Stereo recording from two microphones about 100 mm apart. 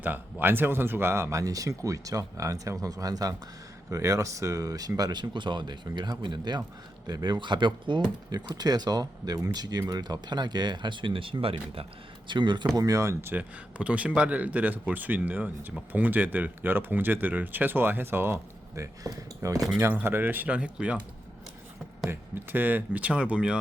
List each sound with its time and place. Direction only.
0.0 s speech: 20° right (ahead or behind); by 11.9 s 70° right (ahead or behind)
12.3 s speech: 50° right (ahead or behind); by 13.3 s 30° right (ahead or behind)
13.3 s speech: 15° right (ahead or behind); by 19.6 s 35° right (ahead or behind)
19.8 s speech: 20° right (ahead or behind)
22.1 s speech: 20° right (ahead or behind)